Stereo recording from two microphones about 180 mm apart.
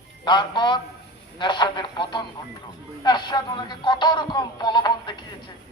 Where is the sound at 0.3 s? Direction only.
25° left (ahead or behind).